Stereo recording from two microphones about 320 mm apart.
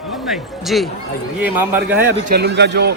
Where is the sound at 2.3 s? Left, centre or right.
Right.